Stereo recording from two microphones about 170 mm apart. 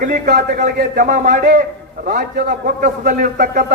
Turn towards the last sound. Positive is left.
turn(degrees=-50)  # may be behind; listen again after turning